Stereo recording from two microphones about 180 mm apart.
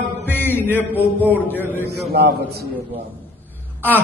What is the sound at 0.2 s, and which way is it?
Mantra, 10° left (ahead or behind).